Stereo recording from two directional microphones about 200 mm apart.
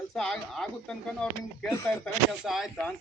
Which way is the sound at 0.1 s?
Centre (ahead or behind).